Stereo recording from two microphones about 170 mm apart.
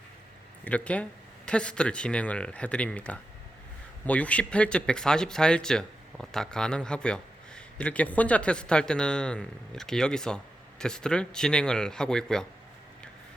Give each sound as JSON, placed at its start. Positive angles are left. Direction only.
{"t": 0.6, "sound": "speech", "side_deg": 5}